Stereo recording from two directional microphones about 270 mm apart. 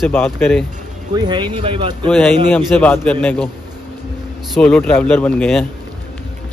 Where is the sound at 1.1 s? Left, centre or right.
Centre.